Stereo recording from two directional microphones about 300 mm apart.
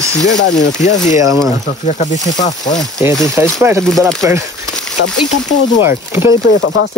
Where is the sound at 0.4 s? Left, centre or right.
Left.